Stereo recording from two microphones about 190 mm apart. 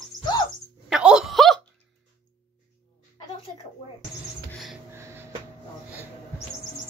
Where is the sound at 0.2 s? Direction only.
20° left (ahead or behind).